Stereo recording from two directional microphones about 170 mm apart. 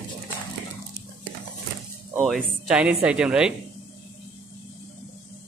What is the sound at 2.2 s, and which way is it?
Speech, centre (ahead or behind).